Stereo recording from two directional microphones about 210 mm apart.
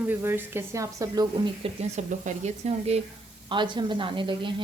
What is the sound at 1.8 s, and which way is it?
Speech, 35° right (ahead or behind).